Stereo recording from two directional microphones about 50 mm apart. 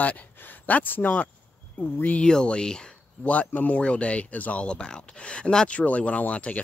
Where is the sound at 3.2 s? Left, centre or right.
Left.